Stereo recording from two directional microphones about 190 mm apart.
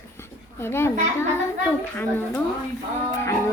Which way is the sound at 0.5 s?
10° left (ahead or behind).